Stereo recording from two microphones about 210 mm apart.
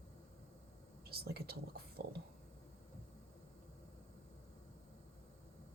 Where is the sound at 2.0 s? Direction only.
50° right (ahead or behind).